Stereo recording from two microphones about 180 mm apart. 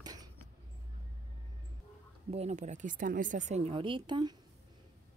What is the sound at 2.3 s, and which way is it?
Speech, 35° right (ahead or behind).